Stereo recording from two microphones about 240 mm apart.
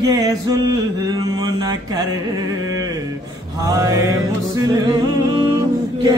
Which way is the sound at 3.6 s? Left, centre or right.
Centre.